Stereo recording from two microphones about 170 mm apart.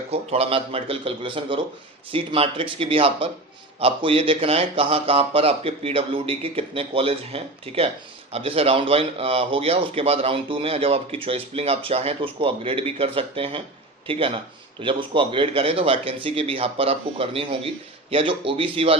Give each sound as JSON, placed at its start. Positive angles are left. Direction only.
{"t": 0.1, "sound": "speech", "side_deg": -35}